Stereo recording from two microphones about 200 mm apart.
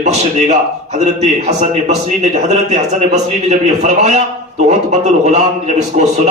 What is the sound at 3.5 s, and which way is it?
Speech, 35° right (ahead or behind).